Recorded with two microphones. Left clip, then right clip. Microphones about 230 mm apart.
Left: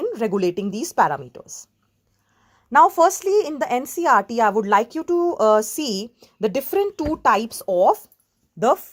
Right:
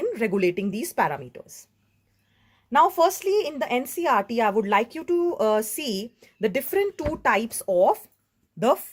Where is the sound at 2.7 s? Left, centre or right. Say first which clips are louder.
Left 5 dB; left.